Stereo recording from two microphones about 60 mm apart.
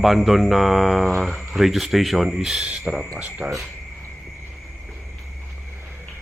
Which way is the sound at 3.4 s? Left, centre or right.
Centre.